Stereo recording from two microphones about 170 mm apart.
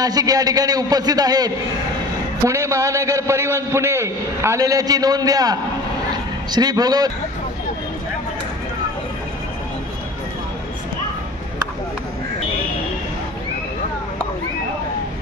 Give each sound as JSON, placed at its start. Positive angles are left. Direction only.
{"t": 0.0, "sound": "a man's voice", "side_deg": -20}